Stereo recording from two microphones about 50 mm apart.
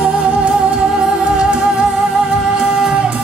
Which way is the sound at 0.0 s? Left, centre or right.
Right.